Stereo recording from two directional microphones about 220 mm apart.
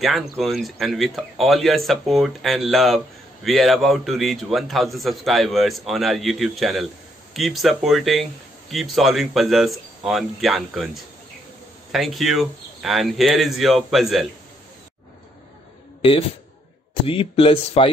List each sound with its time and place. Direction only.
0.0 s a man's voice: centre (ahead or behind)
11.9 s a man's voice: centre (ahead or behind)
16.0 s a man's voice: 25° left (ahead or behind)